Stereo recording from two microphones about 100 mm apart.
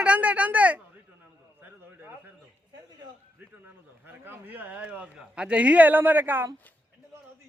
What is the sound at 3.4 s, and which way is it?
Speech, 20° right (ahead or behind).